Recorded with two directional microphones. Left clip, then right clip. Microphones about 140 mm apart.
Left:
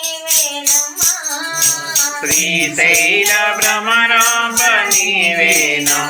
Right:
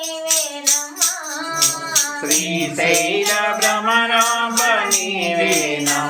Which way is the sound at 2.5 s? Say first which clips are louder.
Left 7 dB; 20° right (ahead or behind).